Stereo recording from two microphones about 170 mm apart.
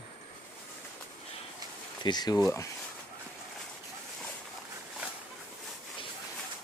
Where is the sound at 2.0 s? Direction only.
25° left (ahead or behind).